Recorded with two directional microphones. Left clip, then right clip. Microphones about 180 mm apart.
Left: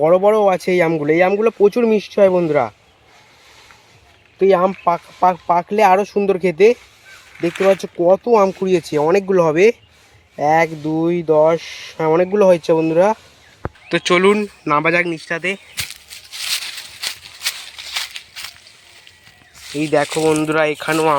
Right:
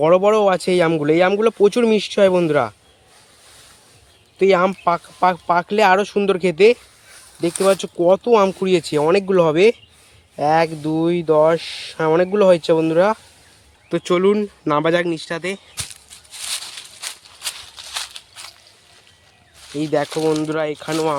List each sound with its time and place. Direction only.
0.0 s speech: 20° right (ahead or behind)
4.4 s speech: 20° right (ahead or behind)
7.4 s speech: 5° right (ahead or behind)
7.8 s speech: 20° right (ahead or behind); by 16.6 s centre (ahead or behind)
17.0 s a sound: 5° left (ahead or behind)
19.7 s speech: 10° left (ahead or behind)
20.3 s speech: centre (ahead or behind)